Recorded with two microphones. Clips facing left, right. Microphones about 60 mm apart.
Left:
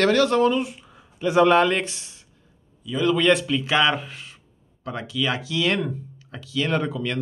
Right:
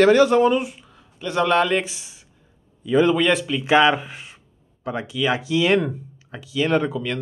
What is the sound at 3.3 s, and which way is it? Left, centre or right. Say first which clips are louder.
Speech: left 1 dB; centre.